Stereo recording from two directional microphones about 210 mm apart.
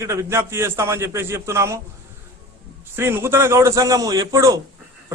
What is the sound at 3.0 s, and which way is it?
A man's voice, 10° right (ahead or behind).